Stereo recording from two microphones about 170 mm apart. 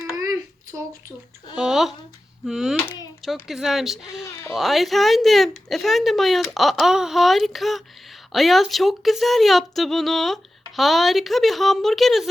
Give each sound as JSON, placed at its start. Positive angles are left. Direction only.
{"t": 1.5, "sound": "speech", "side_deg": -5}
{"t": 2.7, "sound": "a child's voice", "side_deg": 20}
{"t": 3.2, "sound": "speech", "side_deg": 0}